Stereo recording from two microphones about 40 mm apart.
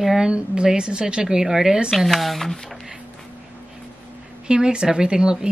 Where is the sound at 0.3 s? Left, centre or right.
Right.